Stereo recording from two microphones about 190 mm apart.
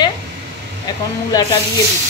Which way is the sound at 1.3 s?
20° left (ahead or behind).